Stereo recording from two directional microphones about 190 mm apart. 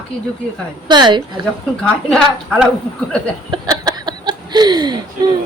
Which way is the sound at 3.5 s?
20° right (ahead or behind).